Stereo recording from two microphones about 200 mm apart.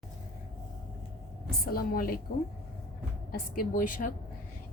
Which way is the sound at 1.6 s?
50° left (ahead or behind).